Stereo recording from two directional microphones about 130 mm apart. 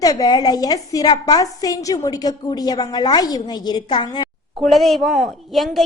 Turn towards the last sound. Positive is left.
turn(degrees=0)  # may be behind; listen again after turning